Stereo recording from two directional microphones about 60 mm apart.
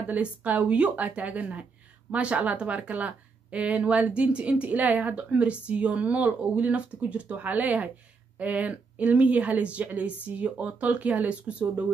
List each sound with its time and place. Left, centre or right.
0.0 s speech: right